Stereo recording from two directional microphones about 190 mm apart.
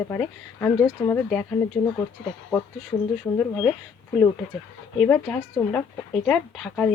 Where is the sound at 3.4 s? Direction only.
10° left (ahead or behind).